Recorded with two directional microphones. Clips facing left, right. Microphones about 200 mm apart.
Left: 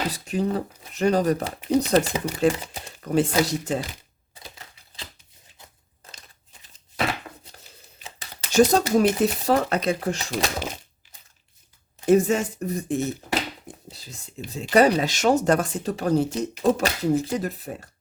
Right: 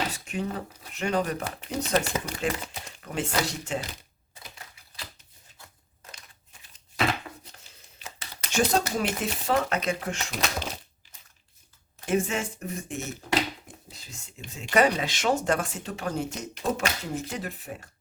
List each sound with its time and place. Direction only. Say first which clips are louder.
0.1 s speech: left 7 dB; 35° left (ahead or behind)
4.4 s typewriter: left 3 dB; 25° left (ahead or behind)
8.0 s speech: left 1 dB; 35° left (ahead or behind)
12.0 s speech: left 8 dB; 40° left (ahead or behind)